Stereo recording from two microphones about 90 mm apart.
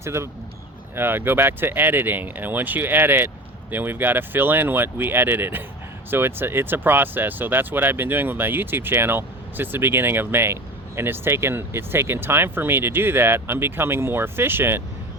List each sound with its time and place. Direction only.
0.0 s speech: 30° right (ahead or behind)